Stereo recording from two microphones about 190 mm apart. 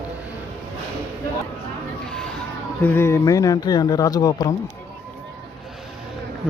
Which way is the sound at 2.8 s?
10° left (ahead or behind).